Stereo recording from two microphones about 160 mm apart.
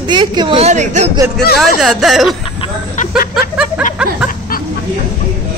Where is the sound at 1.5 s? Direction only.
Centre (ahead or behind).